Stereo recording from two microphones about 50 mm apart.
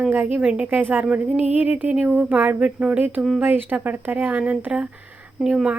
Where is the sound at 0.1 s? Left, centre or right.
Right.